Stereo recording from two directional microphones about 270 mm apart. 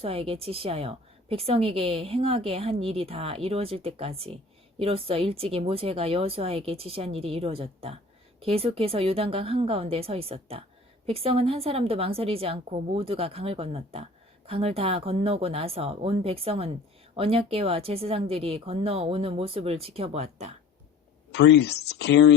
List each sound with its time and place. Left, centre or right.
0.0 s a woman's voice: right
21.3 s speech: left